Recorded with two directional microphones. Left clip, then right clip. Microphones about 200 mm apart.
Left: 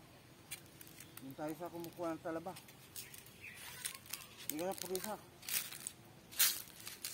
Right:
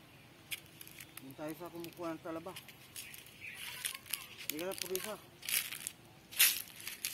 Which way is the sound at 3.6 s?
40° left (ahead or behind).